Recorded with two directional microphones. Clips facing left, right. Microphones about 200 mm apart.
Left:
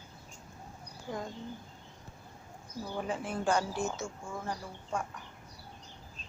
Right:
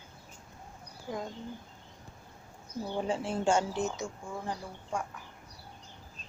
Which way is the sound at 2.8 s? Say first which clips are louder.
Right 3 dB; 25° right (ahead or behind).